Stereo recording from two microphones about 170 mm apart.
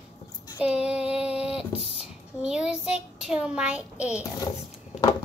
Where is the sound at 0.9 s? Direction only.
5° right (ahead or behind).